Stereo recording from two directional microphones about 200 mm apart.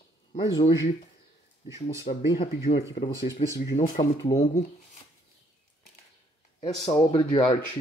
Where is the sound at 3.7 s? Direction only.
35° left (ahead or behind).